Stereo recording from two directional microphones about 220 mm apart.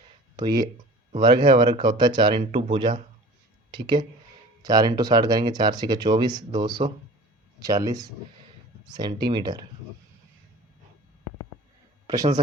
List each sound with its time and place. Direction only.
0.3 s speech: 20° right (ahead or behind)
12.0 s speech: 15° right (ahead or behind)